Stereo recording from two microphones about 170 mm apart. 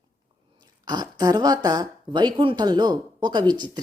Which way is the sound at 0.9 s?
25° right (ahead or behind).